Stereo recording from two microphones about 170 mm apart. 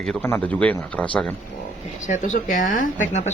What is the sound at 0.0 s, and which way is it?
Speech, 5° left (ahead or behind).